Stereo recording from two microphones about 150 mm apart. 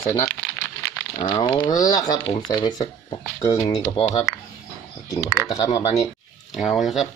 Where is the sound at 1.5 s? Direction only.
30° left (ahead or behind).